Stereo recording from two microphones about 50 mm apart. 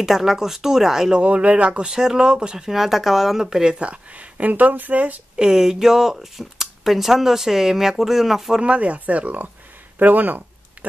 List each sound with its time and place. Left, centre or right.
0.0 s speech: centre
1.2 s speech: right
1.9 s speech: centre
3.8 s speech: right
5.3 s speech: centre
8.5 s speech: right
9.9 s a sound: right